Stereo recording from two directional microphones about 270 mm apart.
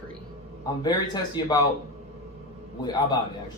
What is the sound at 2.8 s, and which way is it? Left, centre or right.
Speech, centre.